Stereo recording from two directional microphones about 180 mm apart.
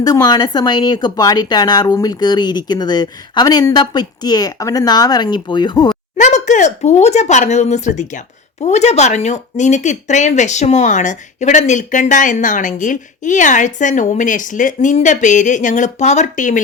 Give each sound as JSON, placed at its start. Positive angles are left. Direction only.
{"t": 0.0, "sound": "a woman's voice", "side_deg": 20}
{"t": 6.1, "sound": "speech", "side_deg": 40}